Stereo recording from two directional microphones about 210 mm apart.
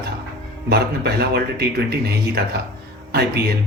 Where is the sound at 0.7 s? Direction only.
50° right (ahead or behind).